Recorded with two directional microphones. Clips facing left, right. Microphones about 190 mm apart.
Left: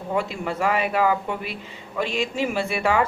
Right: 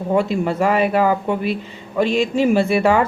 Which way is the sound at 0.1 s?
35° right (ahead or behind).